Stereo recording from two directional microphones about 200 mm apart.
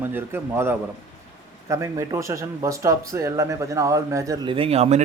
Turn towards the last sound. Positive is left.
turn(degrees=-30)  # may be behind; listen again after turning